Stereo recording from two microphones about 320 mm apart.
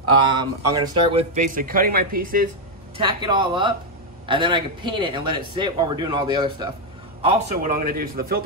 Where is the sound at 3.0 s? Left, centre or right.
Centre.